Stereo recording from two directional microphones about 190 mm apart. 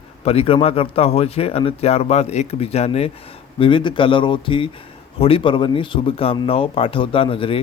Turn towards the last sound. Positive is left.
turn(degrees=30)  # may be behind; listen again after turning